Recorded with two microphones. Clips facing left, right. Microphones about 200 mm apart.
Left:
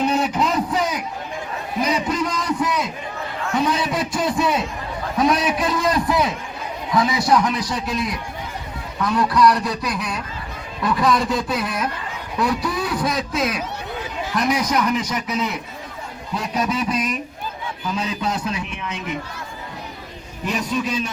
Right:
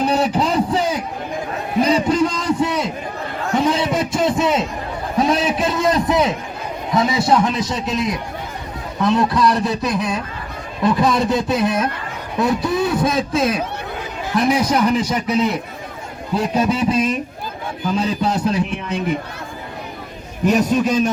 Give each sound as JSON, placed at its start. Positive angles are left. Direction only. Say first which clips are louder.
{"t": 0.0, "sound": "a sound", "louder": "right 2 dB", "side_deg": -35}
{"t": 6.9, "sound": "a man's voice", "louder": "right 2 dB", "side_deg": -25}
{"t": 20.4, "sound": "a man's voice", "louder": "right 8 dB", "side_deg": -45}